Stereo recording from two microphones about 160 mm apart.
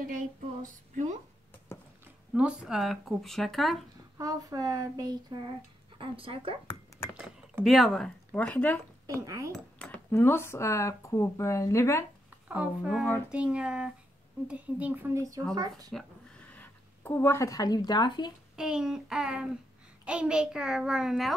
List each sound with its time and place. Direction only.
0.0 s a sound: 55° right (ahead or behind)
2.3 s speech: 5° right (ahead or behind)
4.2 s speech: 20° right (ahead or behind)
5.9 s speech: 35° right (ahead or behind)
7.6 s speech: centre (ahead or behind)
9.0 s speech: 20° right (ahead or behind)
9.8 s speech: 10° left (ahead or behind)
12.4 s a woman's voice: 5° right (ahead or behind); by 15.9 s 25° right (ahead or behind)
16.5 s speech: 10° left (ahead or behind); by 18.3 s 30° left (ahead or behind)
18.6 s speech: 5° right (ahead or behind)